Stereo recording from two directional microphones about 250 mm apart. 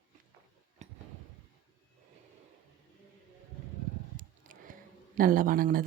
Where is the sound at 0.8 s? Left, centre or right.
Right.